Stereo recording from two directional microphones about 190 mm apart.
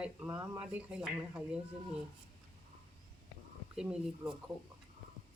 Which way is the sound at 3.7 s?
5° right (ahead or behind).